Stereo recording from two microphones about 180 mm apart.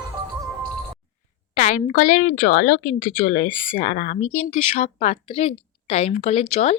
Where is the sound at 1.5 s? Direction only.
40° left (ahead or behind).